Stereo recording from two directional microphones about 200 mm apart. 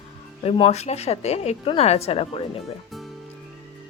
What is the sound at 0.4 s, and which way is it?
A woman's voice, 30° left (ahead or behind).